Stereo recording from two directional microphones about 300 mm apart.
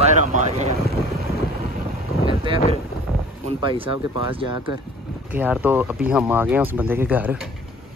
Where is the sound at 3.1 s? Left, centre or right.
Centre.